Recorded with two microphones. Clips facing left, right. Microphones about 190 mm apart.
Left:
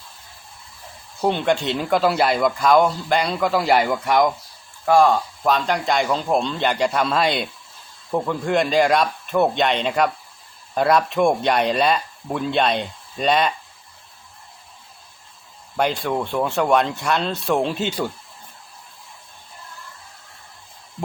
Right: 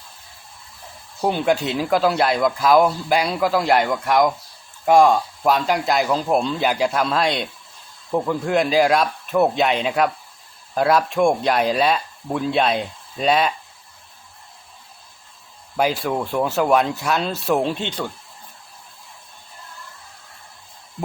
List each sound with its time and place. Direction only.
1.2 s speech: 5° right (ahead or behind)
4.9 s speech: 15° right (ahead or behind)
15.8 s speech: 5° right (ahead or behind)